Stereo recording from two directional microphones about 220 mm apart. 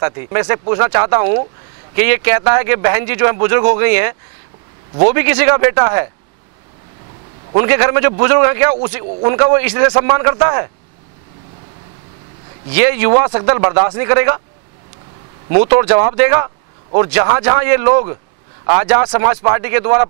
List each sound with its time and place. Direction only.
0.0 s speech: 20° right (ahead or behind)
2.0 s speech: 15° right (ahead or behind)
7.5 s speech: 15° right (ahead or behind)
12.7 s speech: 15° right (ahead or behind)
15.5 s speech: 35° right (ahead or behind)
15.8 s speech: 25° right (ahead or behind)